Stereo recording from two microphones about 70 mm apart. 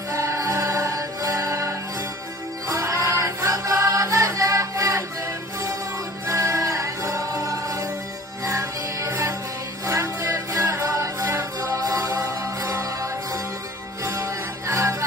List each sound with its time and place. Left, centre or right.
0.1 s music: right
6.2 s music: right
9.8 s music: right
11.7 s music: right
12.6 s music: right